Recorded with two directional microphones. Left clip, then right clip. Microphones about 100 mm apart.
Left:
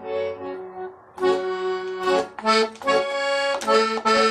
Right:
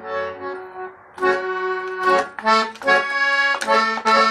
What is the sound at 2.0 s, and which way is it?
Accordion, 25° left (ahead or behind).